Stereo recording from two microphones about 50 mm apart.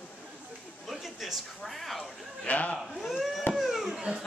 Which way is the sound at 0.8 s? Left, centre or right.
Centre.